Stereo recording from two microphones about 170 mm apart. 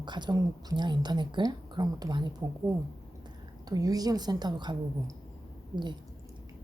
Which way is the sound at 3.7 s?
20° right (ahead or behind).